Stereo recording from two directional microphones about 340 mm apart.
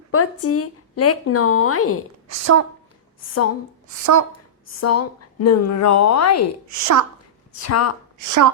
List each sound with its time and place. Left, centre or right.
0.1 s speech: left
2.2 s a woman's voice: right
3.2 s a woman's voice: left
3.8 s speech: right
4.3 s speech: left
6.7 s a woman's voice: right
7.6 s a woman's voice: left
8.2 s speech: right